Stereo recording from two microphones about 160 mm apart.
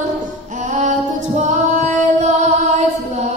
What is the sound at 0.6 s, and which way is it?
Female singing, 50° right (ahead or behind).